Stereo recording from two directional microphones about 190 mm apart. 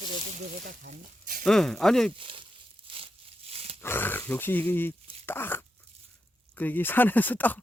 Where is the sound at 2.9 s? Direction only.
25° right (ahead or behind).